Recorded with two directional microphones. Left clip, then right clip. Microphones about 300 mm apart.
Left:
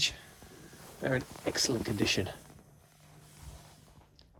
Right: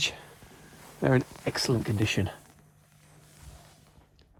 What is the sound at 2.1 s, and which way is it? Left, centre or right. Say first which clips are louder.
Speech: right 1 dB; centre.